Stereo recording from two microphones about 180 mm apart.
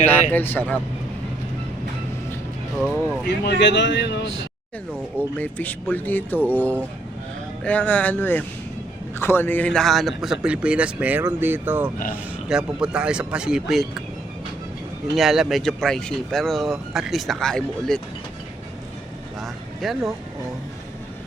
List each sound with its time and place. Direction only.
0.0 s speech: 10° left (ahead or behind)
3.2 s speech: 65° left (ahead or behind)
5.4 s speech: 10° left (ahead or behind)
15.1 s speech: centre (ahead or behind)
19.4 s a sound: centre (ahead or behind)